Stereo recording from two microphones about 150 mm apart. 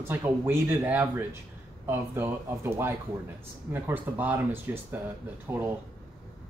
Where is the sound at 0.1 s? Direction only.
15° right (ahead or behind).